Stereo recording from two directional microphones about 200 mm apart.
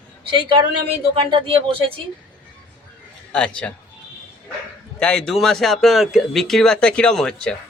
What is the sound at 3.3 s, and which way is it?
Speech, 5° left (ahead or behind).